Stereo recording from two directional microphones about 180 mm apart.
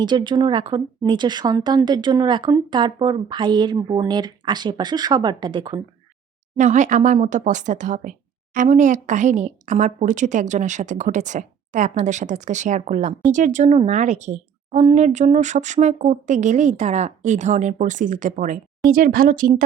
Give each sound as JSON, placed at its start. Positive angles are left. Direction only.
{"t": 0.0, "sound": "speech", "side_deg": -25}
{"t": 6.6, "sound": "a woman's voice", "side_deg": -45}